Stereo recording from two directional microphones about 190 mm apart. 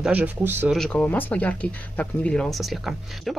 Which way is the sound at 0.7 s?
5° left (ahead or behind).